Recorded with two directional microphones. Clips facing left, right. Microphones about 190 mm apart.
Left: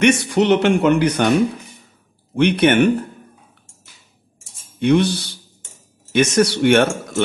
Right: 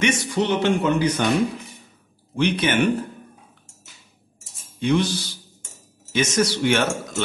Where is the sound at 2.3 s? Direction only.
65° left (ahead or behind).